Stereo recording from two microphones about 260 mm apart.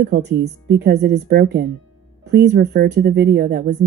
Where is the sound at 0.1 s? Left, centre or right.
Right.